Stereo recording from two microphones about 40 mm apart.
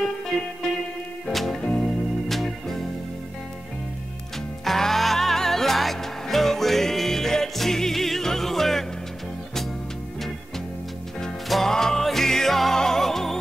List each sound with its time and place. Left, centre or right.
1.2 s music: centre
4.6 s music: centre
11.4 s music: centre
11.7 s music: centre